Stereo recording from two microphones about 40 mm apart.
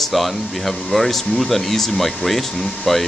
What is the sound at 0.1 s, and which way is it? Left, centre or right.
Speech, centre.